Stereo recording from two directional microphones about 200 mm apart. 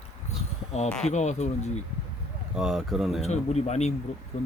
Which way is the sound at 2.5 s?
Centre (ahead or behind).